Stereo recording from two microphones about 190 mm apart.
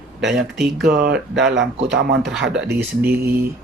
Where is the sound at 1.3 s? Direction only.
65° right (ahead or behind).